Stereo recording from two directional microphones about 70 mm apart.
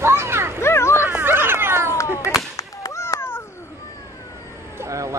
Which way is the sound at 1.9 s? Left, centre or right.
Left.